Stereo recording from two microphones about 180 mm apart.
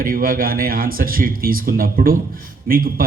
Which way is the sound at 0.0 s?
50° right (ahead or behind).